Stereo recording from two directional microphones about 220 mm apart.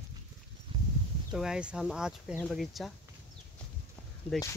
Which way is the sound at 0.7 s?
25° right (ahead or behind).